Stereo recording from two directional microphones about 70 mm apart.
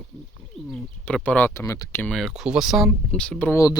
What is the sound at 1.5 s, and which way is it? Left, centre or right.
Speech, left.